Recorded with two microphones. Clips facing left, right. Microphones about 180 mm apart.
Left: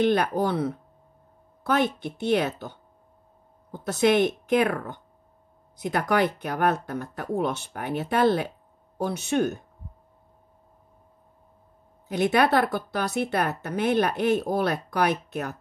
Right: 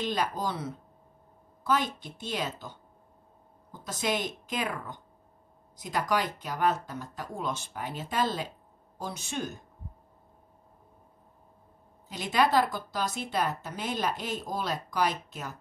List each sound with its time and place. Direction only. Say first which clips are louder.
0.0 s a woman's voice: left 8 dB; 60° left (ahead or behind)
12.1 s a woman's voice: left 5 dB; 60° left (ahead or behind)